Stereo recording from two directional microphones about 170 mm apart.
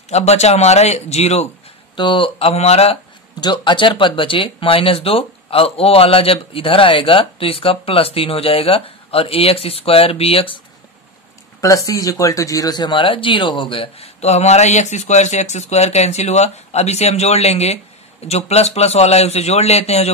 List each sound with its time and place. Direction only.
0.1 s speech: 40° left (ahead or behind)
11.6 s speech: 20° left (ahead or behind); by 20.1 s 40° left (ahead or behind)